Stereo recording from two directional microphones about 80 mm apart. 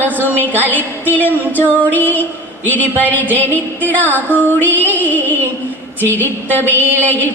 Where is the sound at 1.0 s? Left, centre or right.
Left.